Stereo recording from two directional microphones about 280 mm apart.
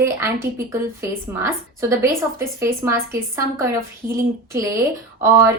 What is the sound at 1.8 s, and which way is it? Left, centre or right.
A woman's voice, centre.